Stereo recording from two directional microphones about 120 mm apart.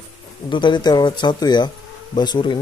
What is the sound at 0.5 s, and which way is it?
Speech, 40° left (ahead or behind).